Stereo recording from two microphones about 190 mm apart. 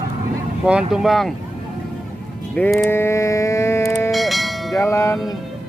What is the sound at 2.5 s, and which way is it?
Speech, 10° left (ahead or behind).